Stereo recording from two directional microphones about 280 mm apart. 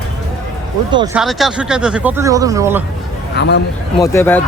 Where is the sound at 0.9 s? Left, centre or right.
Centre.